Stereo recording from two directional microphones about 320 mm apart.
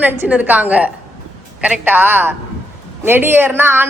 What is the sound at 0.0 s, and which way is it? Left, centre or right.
A man's voice, centre.